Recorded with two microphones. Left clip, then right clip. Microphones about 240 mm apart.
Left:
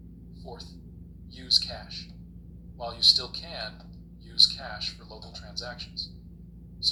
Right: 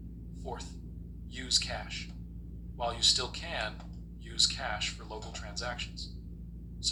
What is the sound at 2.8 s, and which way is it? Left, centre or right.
A man's voice, centre.